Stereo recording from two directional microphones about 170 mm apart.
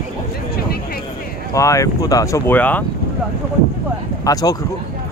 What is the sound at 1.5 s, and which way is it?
Speech, 20° left (ahead or behind).